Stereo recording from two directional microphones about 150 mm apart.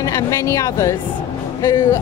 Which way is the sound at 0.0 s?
20° left (ahead or behind).